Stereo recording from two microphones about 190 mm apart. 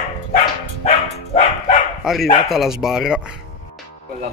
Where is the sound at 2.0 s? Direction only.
Centre (ahead or behind).